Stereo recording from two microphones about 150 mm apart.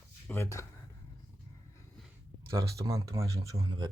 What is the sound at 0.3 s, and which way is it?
Speech, 15° left (ahead or behind).